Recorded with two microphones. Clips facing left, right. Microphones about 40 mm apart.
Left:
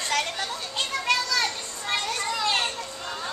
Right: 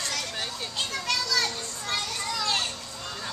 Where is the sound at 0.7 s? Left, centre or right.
Left.